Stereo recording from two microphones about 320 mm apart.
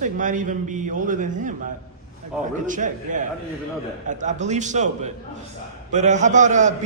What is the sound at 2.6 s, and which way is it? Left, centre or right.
A man's voice, right.